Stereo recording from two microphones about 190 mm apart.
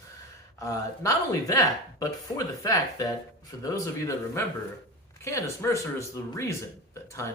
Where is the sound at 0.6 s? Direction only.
15° left (ahead or behind).